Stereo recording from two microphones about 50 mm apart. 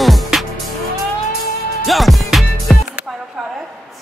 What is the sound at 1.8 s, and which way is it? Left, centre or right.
Music, centre.